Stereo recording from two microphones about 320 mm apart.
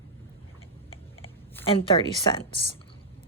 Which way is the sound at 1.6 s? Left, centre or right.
Centre.